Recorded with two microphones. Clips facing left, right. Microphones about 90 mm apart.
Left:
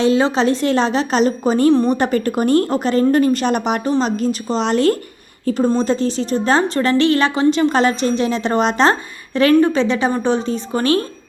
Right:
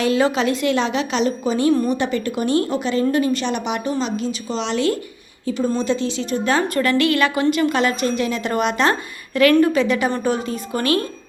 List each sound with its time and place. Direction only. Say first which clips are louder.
0.0 s a woman's voice: left 3 dB; 25° left (ahead or behind)